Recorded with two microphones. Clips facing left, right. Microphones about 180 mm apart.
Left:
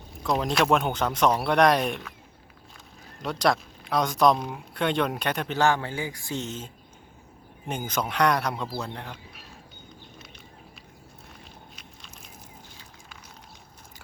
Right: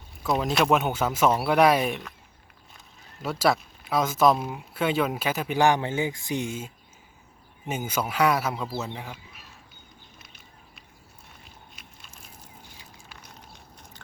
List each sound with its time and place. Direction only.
0.2 s speech: centre (ahead or behind)
3.2 s speech: 5° right (ahead or behind)
5.5 s a man's voice: 15° right (ahead or behind)
7.7 s speech: 5° right (ahead or behind)